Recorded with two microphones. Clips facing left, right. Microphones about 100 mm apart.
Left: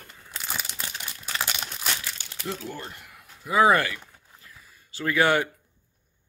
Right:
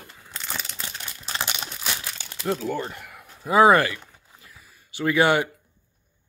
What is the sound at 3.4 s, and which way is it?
Speech, 30° right (ahead or behind).